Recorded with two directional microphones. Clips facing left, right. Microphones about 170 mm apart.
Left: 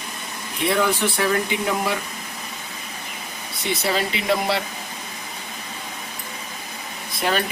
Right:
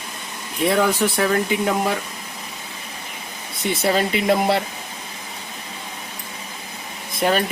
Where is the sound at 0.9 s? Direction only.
40° right (ahead or behind).